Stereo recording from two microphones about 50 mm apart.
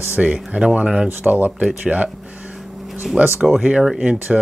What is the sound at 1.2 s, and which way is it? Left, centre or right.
Speech, right.